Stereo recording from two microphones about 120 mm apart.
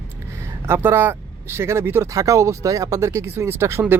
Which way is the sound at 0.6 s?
20° right (ahead or behind).